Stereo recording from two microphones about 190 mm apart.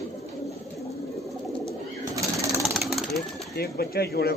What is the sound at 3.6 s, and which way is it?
Speech, 55° left (ahead or behind).